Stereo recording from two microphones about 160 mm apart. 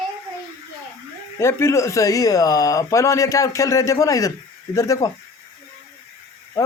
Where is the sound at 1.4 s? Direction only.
15° left (ahead or behind).